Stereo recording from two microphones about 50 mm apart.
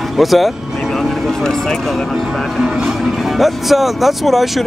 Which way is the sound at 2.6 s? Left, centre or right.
Centre.